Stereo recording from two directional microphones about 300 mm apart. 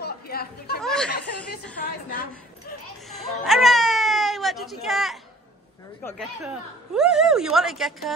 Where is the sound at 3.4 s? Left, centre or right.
Centre.